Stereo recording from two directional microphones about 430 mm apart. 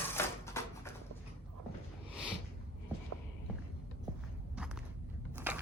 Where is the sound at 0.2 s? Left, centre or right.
Centre.